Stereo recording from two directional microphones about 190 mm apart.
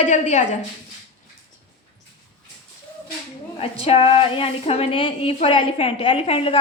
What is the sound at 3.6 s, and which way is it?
A woman's voice, 30° left (ahead or behind).